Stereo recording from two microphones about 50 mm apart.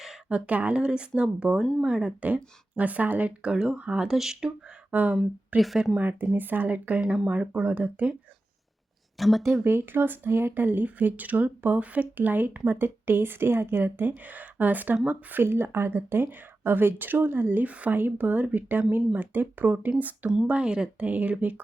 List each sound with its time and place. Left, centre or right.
0.3 s speech: right
0.8 s speech: centre
2.3 s speech: right; by 4.5 s centre
4.9 s speech: right
5.5 s speech: centre
6.0 s speech: right
9.1 s speech: centre
9.6 s speech: right
16.0 s speech: right
20.5 s speech: centre
21.0 s speech: right